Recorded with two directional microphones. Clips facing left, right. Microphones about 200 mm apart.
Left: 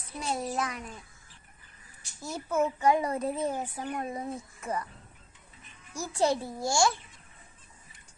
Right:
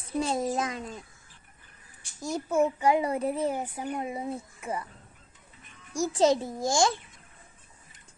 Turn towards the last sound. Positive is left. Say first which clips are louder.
# right 2 dB
turn(degrees=-20)  # may be behind; listen again after turning